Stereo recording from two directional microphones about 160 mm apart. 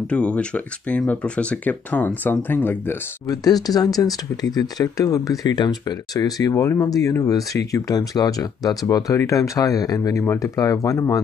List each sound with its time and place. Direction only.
0.0 s speech: 5° left (ahead or behind)
3.3 s speech: 25° left (ahead or behind)